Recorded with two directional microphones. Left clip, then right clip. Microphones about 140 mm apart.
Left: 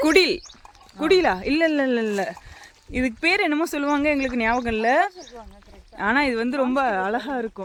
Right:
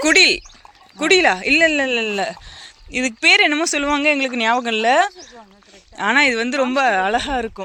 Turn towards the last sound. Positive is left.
turn(degrees=0)  # may be behind; listen again after turning